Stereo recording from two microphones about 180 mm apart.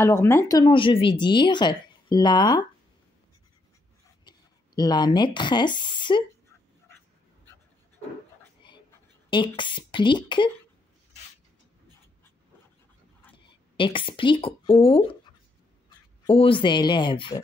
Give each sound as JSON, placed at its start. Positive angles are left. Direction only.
{"t": 0.0, "sound": "speech", "side_deg": 15}
{"t": 4.2, "sound": "speech", "side_deg": 25}
{"t": 9.3, "sound": "speech", "side_deg": 25}
{"t": 13.4, "sound": "a woman's voice", "side_deg": 25}
{"t": 16.3, "sound": "speech", "side_deg": 30}